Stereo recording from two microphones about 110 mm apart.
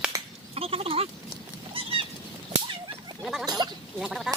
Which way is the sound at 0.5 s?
60° right (ahead or behind).